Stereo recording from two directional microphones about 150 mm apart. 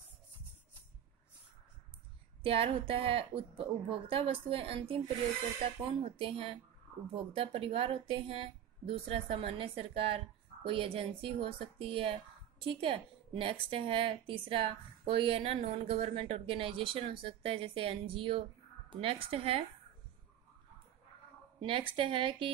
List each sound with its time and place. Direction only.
2.4 s a woman's voice: 40° right (ahead or behind)
6.1 s a woman's voice: 35° right (ahead or behind)
21.5 s a woman's voice: 35° right (ahead or behind)